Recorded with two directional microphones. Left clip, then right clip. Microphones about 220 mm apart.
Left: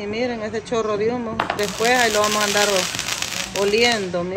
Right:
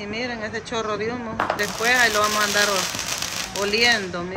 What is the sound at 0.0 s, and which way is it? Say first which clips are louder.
Speech: left 4 dB; 15° left (ahead or behind).